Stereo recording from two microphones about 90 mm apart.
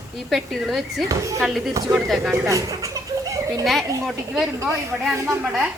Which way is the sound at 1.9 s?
5° right (ahead or behind).